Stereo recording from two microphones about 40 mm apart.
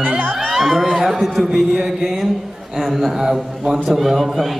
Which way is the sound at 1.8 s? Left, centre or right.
Centre.